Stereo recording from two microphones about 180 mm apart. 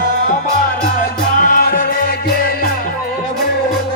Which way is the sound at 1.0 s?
50° left (ahead or behind).